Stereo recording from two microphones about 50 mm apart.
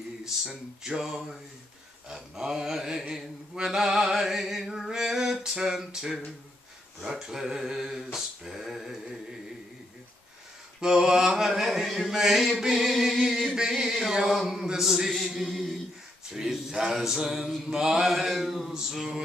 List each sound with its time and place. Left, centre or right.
0.2 s mantra: centre
10.8 s mantra: centre
12.2 s a sound: centre
16.3 s mantra: centre